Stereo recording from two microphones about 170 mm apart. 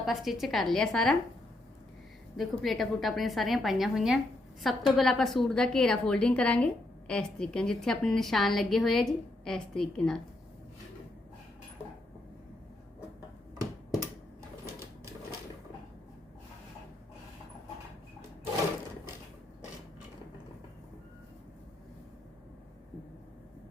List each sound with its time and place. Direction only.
0.0 s a woman's voice: centre (ahead or behind)
2.3 s a woman's voice: centre (ahead or behind)